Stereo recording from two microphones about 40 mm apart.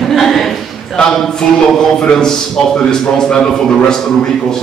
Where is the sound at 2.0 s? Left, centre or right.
Centre.